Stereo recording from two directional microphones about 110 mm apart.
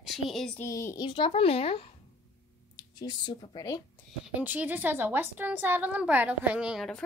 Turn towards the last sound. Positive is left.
turn(degrees=-10)  # may be behind; listen again after turning